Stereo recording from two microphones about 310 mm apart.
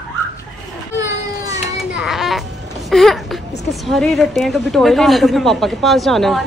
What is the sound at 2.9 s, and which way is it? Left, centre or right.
A woman's voice, centre.